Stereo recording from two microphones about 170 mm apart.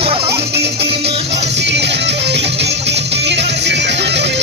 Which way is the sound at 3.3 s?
90° right.